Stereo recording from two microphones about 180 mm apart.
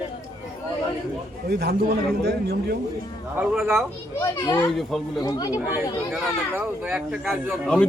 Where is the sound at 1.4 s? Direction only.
65° right (ahead or behind).